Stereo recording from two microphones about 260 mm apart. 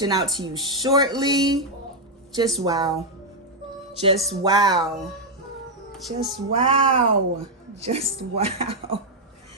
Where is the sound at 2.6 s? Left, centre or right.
Centre.